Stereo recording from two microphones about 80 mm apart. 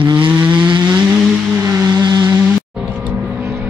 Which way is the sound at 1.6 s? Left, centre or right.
Right.